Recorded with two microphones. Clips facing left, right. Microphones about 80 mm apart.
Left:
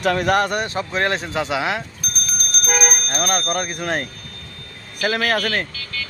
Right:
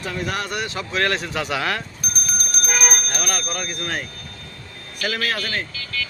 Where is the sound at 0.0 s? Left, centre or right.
Left; by 1.8 s centre.